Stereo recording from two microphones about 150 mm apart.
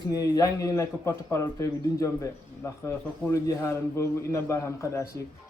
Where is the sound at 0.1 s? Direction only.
25° left (ahead or behind).